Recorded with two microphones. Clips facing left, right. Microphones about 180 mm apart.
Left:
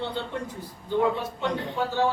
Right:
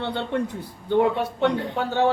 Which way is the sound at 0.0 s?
65° right (ahead or behind).